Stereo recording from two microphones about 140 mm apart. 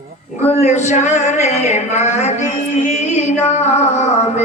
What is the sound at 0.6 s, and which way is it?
Speech, 55° left (ahead or behind).